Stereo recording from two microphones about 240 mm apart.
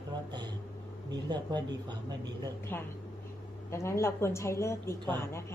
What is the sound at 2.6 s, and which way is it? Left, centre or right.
A woman's voice, centre.